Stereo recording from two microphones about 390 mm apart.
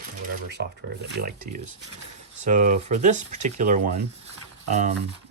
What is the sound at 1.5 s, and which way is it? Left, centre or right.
Speech, right.